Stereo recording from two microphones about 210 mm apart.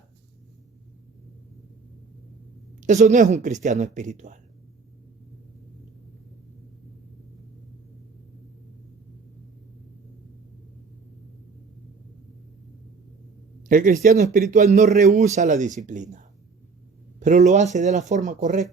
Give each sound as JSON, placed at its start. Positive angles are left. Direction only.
{"t": 2.8, "sound": "a man's voice", "side_deg": -35}
{"t": 13.7, "sound": "a man's voice", "side_deg": -40}